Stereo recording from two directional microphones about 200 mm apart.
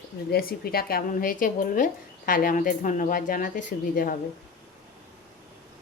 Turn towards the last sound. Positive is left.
turn(degrees=45)  # may be behind; listen again after turning